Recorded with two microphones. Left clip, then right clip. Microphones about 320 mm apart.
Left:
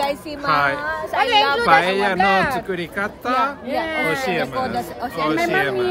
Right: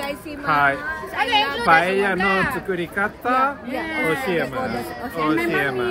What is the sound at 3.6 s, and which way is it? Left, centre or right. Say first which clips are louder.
Speech: left 2 dB; centre.